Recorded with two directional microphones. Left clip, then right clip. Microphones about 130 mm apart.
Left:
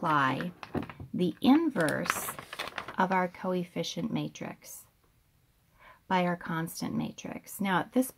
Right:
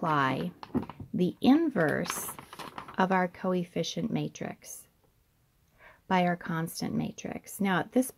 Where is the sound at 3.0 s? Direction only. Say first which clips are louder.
Right 1 dB; 35° right (ahead or behind).